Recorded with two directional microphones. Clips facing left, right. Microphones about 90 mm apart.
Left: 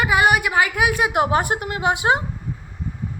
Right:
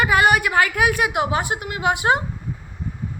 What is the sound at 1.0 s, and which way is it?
A woman's voice, 40° left (ahead or behind).